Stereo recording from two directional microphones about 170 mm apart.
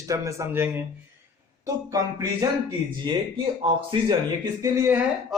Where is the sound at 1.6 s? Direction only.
20° right (ahead or behind).